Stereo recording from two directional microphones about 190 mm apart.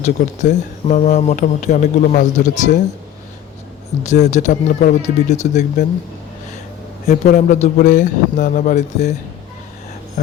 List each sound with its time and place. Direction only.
0.0 s speech: 40° left (ahead or behind)
4.0 s speech: 40° left (ahead or behind)
7.3 s speech: 40° left (ahead or behind)